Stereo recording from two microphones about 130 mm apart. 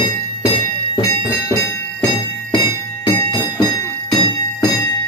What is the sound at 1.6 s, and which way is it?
Jingle bell, 30° left (ahead or behind).